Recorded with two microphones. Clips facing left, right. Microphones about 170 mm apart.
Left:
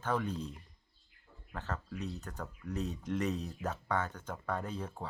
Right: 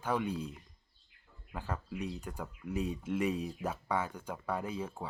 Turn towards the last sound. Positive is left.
turn(degrees=-5)  # may be behind; listen again after turning